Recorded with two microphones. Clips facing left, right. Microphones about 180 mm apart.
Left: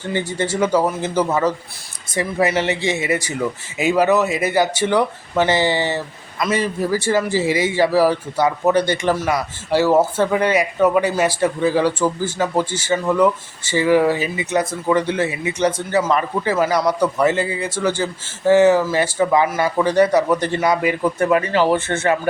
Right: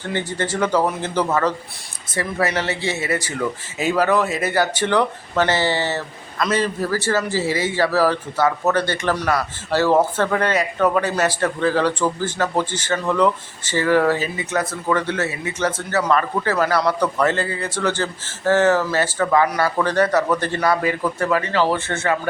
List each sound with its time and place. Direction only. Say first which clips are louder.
0.1 s a man's voice: left 2 dB; 10° left (ahead or behind)